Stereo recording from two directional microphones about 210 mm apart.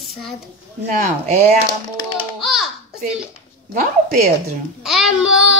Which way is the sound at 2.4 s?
Centre (ahead or behind).